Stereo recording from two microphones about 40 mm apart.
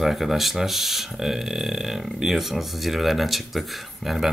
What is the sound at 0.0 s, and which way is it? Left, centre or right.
Speech, centre.